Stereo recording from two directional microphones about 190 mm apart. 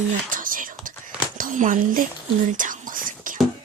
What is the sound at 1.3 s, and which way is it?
Speech, 45° right (ahead or behind).